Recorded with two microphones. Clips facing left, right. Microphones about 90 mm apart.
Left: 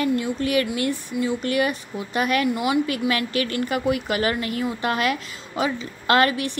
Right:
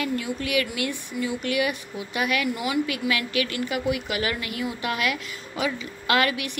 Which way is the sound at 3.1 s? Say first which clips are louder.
Left 2 dB; 35° left (ahead or behind).